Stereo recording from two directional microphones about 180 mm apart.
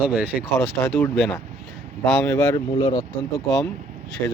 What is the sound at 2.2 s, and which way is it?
Speech, 15° left (ahead or behind).